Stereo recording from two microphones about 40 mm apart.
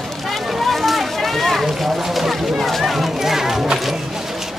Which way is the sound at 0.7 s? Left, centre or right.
Centre.